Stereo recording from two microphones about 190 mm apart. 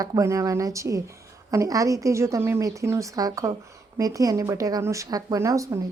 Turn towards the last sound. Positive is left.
turn(degrees=-15)  # may be behind; listen again after turning